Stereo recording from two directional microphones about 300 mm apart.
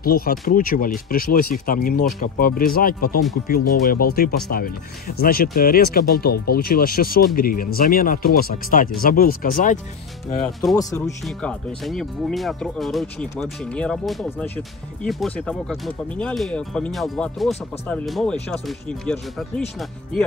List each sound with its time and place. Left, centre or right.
0.0 s speech: left
11.2 s speech: centre